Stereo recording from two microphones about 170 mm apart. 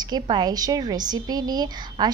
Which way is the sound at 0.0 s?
25° right (ahead or behind).